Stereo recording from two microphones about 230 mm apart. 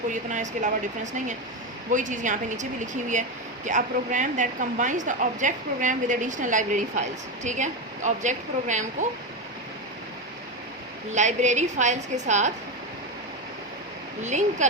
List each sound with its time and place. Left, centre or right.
0.1 s speech: right
1.9 s speech: right
11.1 s speech: right
14.2 s speech: right